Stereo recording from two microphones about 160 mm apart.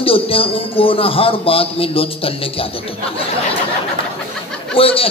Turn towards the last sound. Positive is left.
turn(degrees=35)  # may be behind; listen again after turning